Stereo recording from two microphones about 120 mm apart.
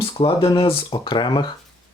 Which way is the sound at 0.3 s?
35° left (ahead or behind).